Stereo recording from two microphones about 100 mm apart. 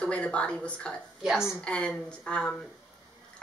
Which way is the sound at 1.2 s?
5° right (ahead or behind).